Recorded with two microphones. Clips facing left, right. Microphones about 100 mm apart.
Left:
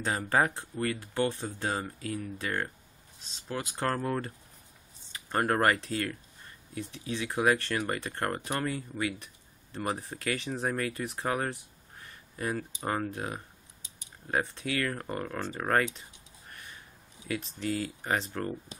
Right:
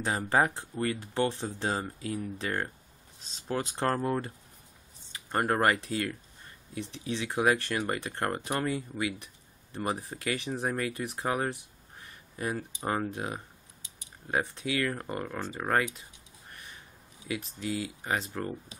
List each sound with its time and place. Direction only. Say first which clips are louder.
0.0 s speech: right 1 dB; 25° right (ahead or behind)
3.2 s speech: right 4 dB; 35° right (ahead or behind)
5.5 s speech: even; 20° right (ahead or behind)
17.3 s speech: left 1 dB; 15° right (ahead or behind)
17.6 s speech: left 1 dB; 50° left (ahead or behind)